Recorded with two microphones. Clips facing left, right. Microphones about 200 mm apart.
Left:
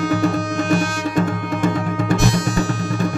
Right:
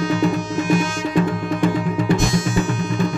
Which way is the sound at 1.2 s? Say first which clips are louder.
Right 1 dB; 45° left (ahead or behind).